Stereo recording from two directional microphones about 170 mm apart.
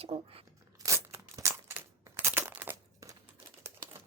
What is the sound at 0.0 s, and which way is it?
Speech, 35° right (ahead or behind).